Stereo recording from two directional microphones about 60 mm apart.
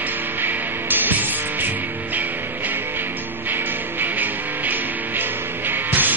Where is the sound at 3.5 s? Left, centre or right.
Right.